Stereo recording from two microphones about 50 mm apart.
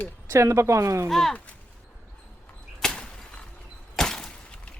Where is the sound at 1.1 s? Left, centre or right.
Centre.